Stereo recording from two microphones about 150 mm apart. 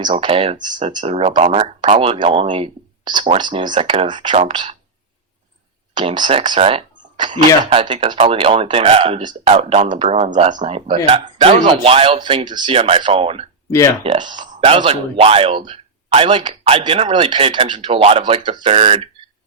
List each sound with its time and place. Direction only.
0.2 s speech: 40° right (ahead or behind)
0.7 s speech: 55° right (ahead or behind)
1.0 s speech: 45° right (ahead or behind)
5.9 s speech: 30° right (ahead or behind)
10.4 s speech: 50° right (ahead or behind)
13.7 s speech: 20° left (ahead or behind)
14.0 s speech: 35° right (ahead or behind)
14.4 s a sound: 60° right (ahead or behind)
14.7 s speech: 40° right (ahead or behind)
18.7 s speech: 50° right (ahead or behind)